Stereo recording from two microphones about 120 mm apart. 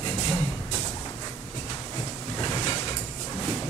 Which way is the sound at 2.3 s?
35° left (ahead or behind).